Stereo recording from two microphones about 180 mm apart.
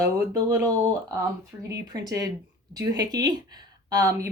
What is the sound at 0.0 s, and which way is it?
Speech, 15° right (ahead or behind).